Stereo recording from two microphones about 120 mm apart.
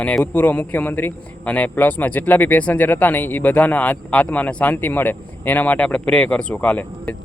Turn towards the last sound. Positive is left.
turn(degrees=10)  # may be behind; listen again after turning